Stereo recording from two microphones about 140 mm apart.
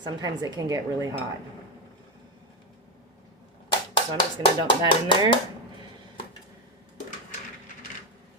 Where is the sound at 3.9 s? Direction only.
35° left (ahead or behind).